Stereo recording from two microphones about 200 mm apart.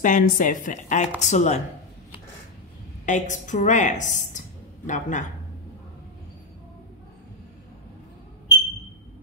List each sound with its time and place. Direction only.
0.0 s speech: 40° left (ahead or behind)
3.1 s a woman's voice: 40° left (ahead or behind)